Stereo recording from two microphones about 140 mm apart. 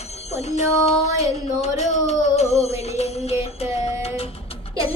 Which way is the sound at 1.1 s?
50° left (ahead or behind).